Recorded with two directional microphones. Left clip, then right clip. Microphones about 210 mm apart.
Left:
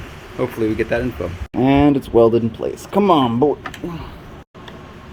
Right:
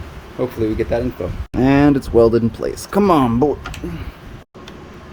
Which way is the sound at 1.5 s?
20° right (ahead or behind).